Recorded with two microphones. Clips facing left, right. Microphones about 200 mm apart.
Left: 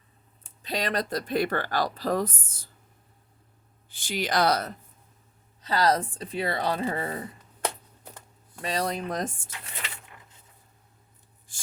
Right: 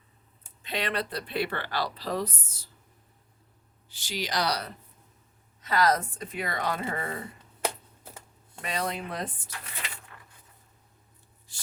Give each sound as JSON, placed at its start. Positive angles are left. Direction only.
{"t": 0.6, "sound": "speech", "side_deg": 40}
{"t": 3.8, "sound": "speech", "side_deg": 50}
{"t": 5.6, "sound": "speech", "side_deg": 30}
{"t": 7.6, "sound": "a sound", "side_deg": -10}
{"t": 8.6, "sound": "speech", "side_deg": 35}
{"t": 10.2, "sound": "coin", "side_deg": 20}
{"t": 11.5, "sound": "a sound", "side_deg": 50}